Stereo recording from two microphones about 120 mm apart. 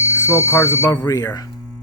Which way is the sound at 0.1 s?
25° left (ahead or behind).